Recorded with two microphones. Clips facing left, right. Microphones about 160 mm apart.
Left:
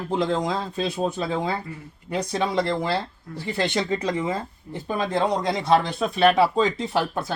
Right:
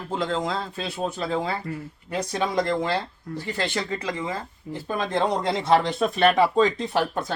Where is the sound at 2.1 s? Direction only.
10° left (ahead or behind).